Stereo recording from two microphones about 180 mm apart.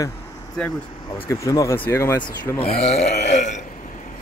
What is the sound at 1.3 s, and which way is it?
Speech, 15° left (ahead or behind).